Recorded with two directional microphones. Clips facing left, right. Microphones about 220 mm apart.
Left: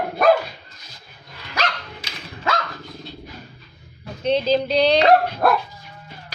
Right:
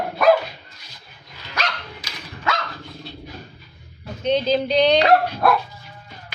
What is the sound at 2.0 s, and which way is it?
Dog, 25° left (ahead or behind).